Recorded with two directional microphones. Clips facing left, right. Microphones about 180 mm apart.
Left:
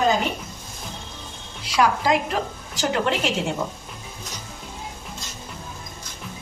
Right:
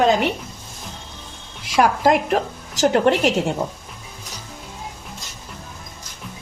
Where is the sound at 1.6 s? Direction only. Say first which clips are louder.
Right 4 dB; 50° right (ahead or behind).